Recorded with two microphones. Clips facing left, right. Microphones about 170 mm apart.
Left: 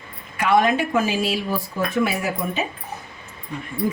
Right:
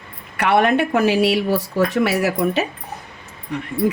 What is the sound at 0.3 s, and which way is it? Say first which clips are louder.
Speech: right 2 dB; 65° right (ahead or behind).